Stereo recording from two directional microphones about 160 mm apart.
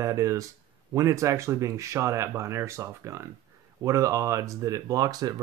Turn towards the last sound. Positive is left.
turn(degrees=-25)  # may be behind; listen again after turning